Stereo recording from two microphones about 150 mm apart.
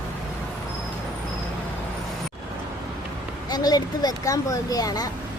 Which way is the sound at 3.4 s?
25° left (ahead or behind).